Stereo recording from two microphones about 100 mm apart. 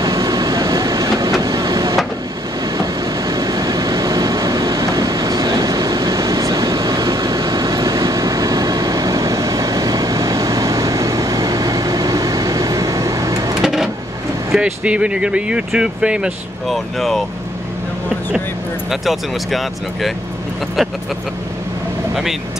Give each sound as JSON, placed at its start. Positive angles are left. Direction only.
{"t": 0.0, "sound": "vehicle", "side_deg": -35}
{"t": 13.6, "sound": "a sound", "side_deg": -5}
{"t": 14.5, "sound": "speech", "side_deg": -10}
{"t": 16.6, "sound": "speech", "side_deg": 0}
{"t": 18.9, "sound": "speech", "side_deg": 0}
{"t": 22.1, "sound": "speech", "side_deg": -5}